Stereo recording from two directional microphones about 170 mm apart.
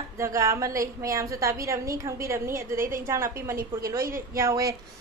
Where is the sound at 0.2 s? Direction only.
20° right (ahead or behind).